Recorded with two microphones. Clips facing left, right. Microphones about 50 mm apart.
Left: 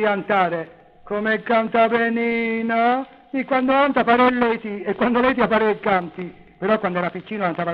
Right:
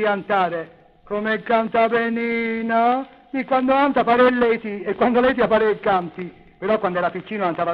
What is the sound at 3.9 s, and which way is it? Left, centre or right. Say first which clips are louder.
Speech: even; left.